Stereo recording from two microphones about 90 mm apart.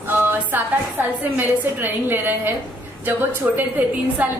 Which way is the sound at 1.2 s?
20° right (ahead or behind).